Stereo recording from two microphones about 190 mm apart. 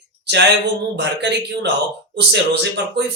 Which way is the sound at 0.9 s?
65° right (ahead or behind).